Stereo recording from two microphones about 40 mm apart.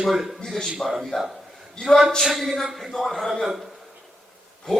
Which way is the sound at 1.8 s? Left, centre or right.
Left.